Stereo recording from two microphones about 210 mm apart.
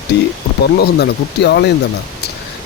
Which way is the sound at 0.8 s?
50° left (ahead or behind).